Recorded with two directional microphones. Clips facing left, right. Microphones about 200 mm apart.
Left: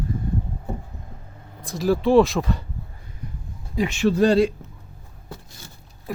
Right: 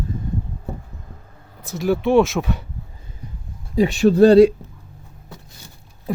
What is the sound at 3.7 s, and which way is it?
Speech, 35° right (ahead or behind).